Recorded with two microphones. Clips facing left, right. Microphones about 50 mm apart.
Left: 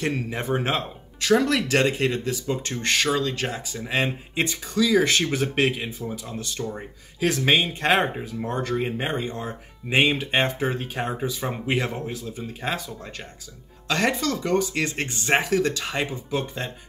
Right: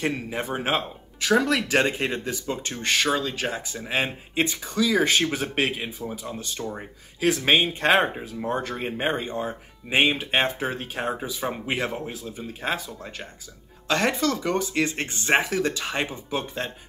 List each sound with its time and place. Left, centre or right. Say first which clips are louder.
0.3 s speech: left 1 dB; centre
7.5 s speech: right 1 dB; centre
7.9 s speech: even; centre
14.2 s speech: left 1 dB; centre